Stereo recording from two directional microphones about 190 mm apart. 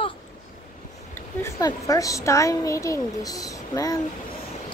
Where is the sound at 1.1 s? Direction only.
15° left (ahead or behind).